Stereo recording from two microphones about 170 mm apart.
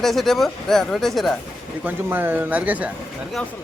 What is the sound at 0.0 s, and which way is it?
Speech, centre (ahead or behind).